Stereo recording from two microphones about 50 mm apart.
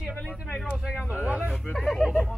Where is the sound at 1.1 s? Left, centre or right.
Right.